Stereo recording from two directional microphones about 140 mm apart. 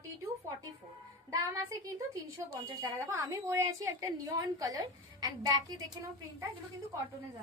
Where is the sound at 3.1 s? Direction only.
20° right (ahead or behind).